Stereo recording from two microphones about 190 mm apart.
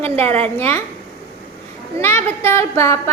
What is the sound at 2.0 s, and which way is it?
A woman's voice, 15° left (ahead or behind).